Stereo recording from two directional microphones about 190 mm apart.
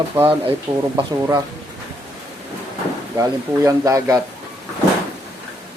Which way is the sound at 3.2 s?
15° right (ahead or behind).